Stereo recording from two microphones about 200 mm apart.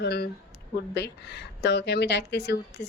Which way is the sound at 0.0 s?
55° left (ahead or behind).